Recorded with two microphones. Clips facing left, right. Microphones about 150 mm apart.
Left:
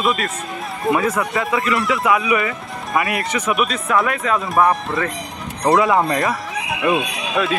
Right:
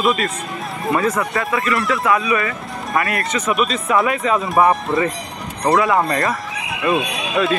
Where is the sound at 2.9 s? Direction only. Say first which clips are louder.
Even; 20° left (ahead or behind).